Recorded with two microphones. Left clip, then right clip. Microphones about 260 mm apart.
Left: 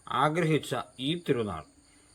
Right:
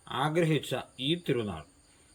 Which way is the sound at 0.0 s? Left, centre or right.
Centre.